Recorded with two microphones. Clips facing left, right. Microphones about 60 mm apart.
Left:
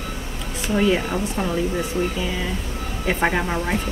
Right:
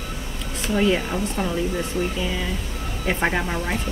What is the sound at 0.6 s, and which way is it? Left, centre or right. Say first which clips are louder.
Speech: left 1 dB; centre.